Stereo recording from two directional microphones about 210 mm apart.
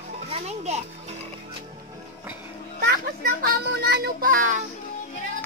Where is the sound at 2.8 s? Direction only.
45° right (ahead or behind).